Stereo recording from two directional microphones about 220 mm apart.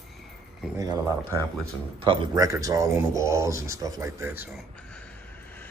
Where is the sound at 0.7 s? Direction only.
15° right (ahead or behind).